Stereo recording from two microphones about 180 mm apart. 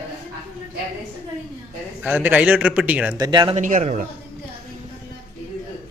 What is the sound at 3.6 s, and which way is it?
Speech, 45° right (ahead or behind).